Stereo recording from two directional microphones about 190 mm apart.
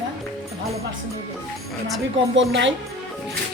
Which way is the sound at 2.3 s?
70° right (ahead or behind).